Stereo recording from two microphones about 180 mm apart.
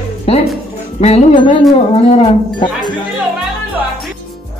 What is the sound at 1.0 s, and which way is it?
Music, 30° left (ahead or behind).